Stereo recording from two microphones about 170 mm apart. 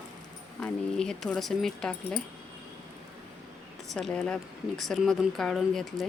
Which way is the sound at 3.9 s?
5° left (ahead or behind).